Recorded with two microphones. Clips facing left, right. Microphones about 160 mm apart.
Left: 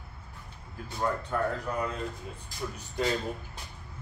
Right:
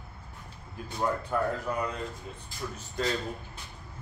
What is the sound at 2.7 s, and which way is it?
Speech, 15° left (ahead or behind).